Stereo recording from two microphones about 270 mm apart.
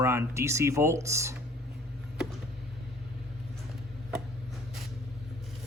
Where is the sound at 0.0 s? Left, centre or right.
Centre.